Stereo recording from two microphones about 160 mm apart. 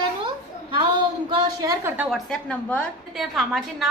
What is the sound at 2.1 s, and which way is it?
A woman's voice, 5° left (ahead or behind).